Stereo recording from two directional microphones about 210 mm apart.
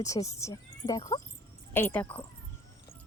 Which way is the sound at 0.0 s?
15° left (ahead or behind).